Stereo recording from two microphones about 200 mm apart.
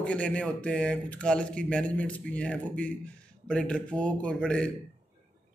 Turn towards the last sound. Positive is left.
turn(degrees=5)  # may be behind; listen again after turning